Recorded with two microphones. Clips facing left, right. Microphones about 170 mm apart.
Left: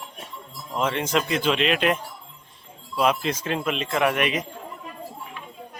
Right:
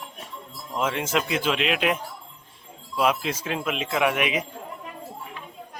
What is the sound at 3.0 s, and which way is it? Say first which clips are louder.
Speech: left 1 dB; 5° right (ahead or behind).